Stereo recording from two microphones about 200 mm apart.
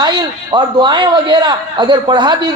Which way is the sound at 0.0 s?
25° right (ahead or behind).